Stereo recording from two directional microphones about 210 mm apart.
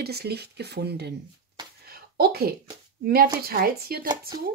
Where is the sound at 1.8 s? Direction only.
45° right (ahead or behind).